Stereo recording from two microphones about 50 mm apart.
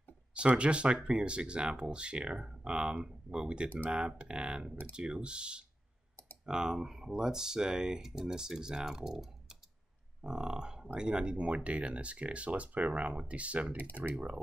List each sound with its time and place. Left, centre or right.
0.3 s speech: right
10.2 s a sound: centre
11.0 s speech: centre